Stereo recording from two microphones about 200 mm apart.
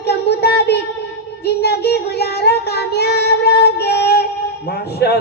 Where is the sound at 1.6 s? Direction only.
55° left (ahead or behind).